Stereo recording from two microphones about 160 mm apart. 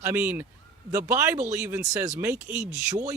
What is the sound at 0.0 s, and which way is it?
Speech, 15° right (ahead or behind).